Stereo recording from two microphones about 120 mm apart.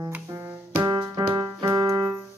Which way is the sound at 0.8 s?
35° right (ahead or behind).